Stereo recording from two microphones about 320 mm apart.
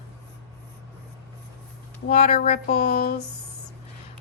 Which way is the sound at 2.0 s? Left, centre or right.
Left.